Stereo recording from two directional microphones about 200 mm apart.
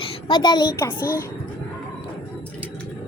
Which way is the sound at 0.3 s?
20° left (ahead or behind).